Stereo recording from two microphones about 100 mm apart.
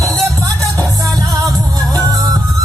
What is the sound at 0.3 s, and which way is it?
Music, 35° right (ahead or behind).